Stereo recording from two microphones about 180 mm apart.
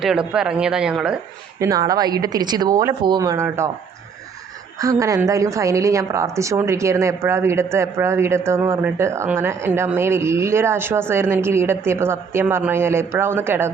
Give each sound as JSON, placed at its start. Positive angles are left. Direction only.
{"t": 0.0, "sound": "speech", "side_deg": -5}
{"t": 1.5, "sound": "speech", "side_deg": -15}
{"t": 4.8, "sound": "a woman's voice", "side_deg": -20}